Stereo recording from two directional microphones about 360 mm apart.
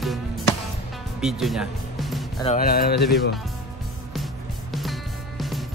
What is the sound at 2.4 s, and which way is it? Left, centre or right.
Speech, left.